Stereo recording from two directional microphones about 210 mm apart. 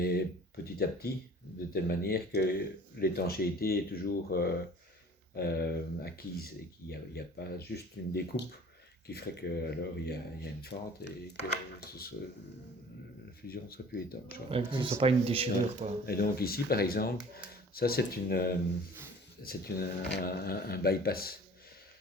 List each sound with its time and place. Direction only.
0.0 s speech: 50° left (ahead or behind)
13.5 s speech: 45° left (ahead or behind)
14.5 s speech: 25° right (ahead or behind)
16.0 s speech: 45° left (ahead or behind)